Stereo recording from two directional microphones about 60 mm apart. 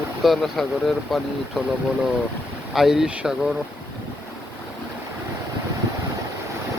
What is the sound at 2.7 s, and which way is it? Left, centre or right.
Speech, centre.